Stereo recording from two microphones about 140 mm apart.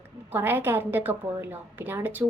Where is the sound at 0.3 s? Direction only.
15° right (ahead or behind).